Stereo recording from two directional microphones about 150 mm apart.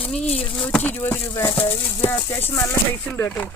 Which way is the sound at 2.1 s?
15° left (ahead or behind).